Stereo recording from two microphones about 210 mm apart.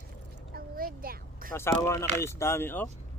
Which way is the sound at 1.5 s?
10° left (ahead or behind).